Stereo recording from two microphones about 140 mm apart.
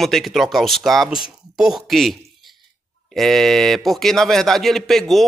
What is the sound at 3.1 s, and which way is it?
A man's voice, centre (ahead or behind).